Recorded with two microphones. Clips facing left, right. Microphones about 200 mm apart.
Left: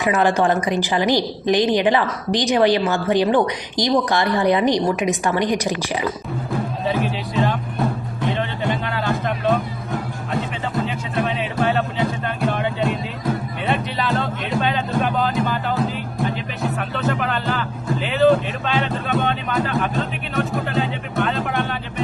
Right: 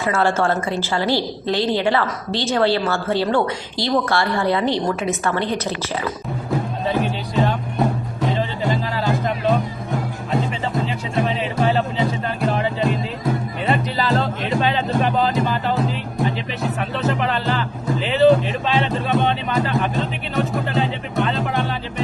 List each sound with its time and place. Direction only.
0.0 s a woman's voice: 15° left (ahead or behind)
6.8 s music: centre (ahead or behind)
11.1 s music: centre (ahead or behind)
18.0 s speech: centre (ahead or behind)